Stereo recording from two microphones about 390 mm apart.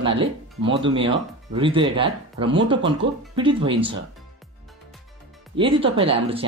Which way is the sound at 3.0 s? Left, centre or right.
Right.